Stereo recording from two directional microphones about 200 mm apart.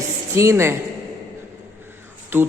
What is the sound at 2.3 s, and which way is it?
Speech, 10° right (ahead or behind).